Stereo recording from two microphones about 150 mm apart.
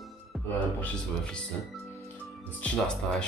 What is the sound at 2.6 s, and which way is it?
Speech, 5° left (ahead or behind).